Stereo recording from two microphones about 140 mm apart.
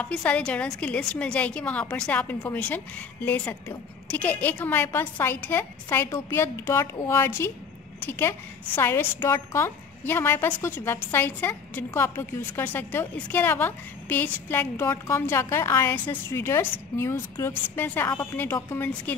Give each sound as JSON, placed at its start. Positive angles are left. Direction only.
{"t": 0.0, "sound": "a woman's voice", "side_deg": 10}